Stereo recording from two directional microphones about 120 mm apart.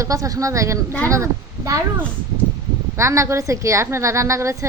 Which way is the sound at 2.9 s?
25° right (ahead or behind).